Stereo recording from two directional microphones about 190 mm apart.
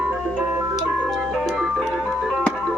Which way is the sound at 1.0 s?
Centre (ahead or behind).